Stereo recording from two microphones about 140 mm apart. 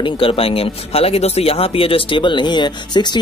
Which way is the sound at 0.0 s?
40° left (ahead or behind).